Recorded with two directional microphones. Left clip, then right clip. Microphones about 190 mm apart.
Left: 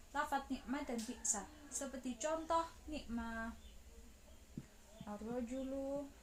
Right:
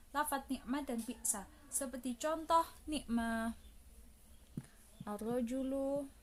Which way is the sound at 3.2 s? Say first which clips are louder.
Right 7 dB; 65° right (ahead or behind).